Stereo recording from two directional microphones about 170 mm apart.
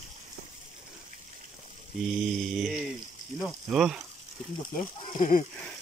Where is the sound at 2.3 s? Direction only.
Centre (ahead or behind).